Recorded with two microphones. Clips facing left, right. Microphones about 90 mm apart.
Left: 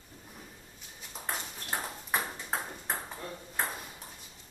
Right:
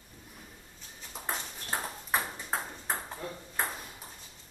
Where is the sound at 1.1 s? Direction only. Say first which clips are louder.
Right 1 dB; centre (ahead or behind).